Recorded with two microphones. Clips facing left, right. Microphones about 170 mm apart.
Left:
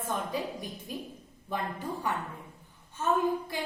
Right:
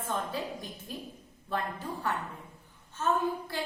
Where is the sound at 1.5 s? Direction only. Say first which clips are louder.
Even; 15° left (ahead or behind).